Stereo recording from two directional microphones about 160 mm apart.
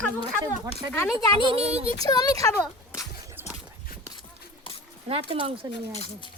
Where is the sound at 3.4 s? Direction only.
15° right (ahead or behind).